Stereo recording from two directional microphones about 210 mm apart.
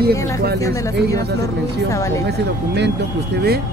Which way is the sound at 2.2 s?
55° right (ahead or behind).